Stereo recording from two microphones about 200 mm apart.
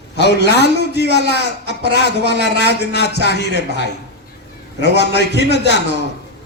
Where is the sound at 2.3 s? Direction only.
60° left (ahead or behind).